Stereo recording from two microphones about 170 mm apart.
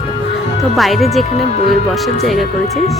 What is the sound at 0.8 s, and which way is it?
Speech, centre (ahead or behind).